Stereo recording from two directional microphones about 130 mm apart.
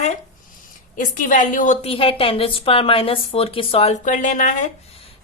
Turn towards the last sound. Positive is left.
turn(degrees=85)